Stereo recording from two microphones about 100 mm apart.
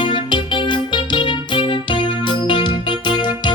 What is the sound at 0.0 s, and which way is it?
Music, 55° left (ahead or behind).